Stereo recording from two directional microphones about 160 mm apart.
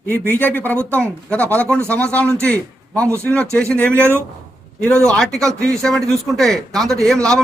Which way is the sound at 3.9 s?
15° right (ahead or behind).